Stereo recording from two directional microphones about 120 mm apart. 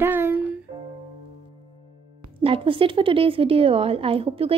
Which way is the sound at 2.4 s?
50° right (ahead or behind).